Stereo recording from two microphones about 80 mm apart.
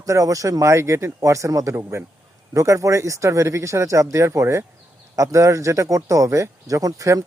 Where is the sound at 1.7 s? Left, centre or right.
Right.